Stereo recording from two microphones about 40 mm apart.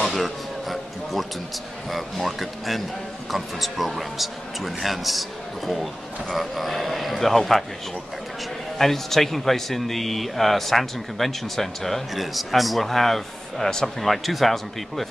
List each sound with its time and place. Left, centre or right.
0.0 s speech: centre
6.3 s speech: centre
8.7 s speech: centre